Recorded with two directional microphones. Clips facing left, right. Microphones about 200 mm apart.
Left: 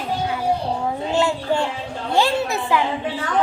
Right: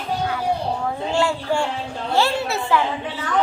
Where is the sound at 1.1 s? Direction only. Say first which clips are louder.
Left 1 dB; 20° left (ahead or behind).